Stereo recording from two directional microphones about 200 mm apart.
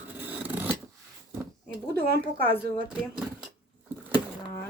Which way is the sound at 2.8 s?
5° right (ahead or behind).